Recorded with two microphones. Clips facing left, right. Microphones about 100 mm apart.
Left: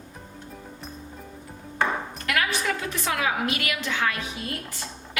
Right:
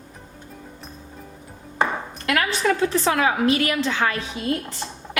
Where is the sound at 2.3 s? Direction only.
35° right (ahead or behind).